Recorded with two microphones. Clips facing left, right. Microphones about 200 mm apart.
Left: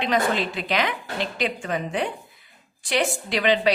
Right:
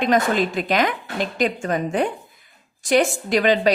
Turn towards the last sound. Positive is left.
turn(degrees=-45)  # may be behind; listen again after turning